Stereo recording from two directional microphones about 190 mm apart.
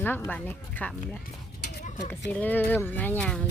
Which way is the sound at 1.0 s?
55° left (ahead or behind).